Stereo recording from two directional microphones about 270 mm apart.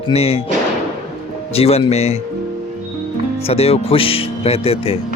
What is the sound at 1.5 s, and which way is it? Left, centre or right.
Speech, left.